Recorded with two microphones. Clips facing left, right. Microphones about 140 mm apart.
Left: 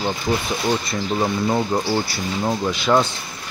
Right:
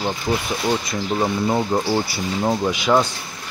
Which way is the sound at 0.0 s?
5° right (ahead or behind).